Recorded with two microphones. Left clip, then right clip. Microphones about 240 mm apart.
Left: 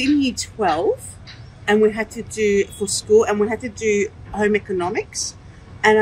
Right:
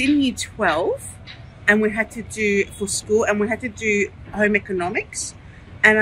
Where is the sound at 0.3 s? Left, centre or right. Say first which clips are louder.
Even; centre.